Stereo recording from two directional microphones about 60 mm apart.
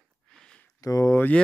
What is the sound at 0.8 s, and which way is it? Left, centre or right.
Speech, left.